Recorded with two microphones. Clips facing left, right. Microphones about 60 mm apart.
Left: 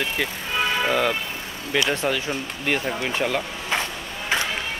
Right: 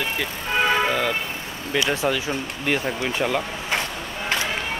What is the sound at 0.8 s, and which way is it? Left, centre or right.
Speech, centre.